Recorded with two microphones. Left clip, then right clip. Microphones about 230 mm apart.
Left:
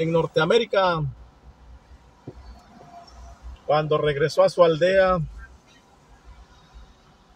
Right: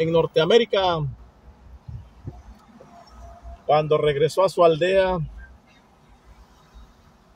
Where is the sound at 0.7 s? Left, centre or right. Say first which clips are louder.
Even; right.